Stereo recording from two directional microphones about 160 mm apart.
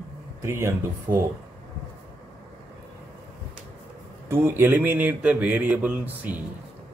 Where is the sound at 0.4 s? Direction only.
15° right (ahead or behind).